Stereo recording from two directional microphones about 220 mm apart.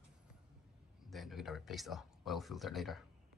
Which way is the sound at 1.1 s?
Centre (ahead or behind).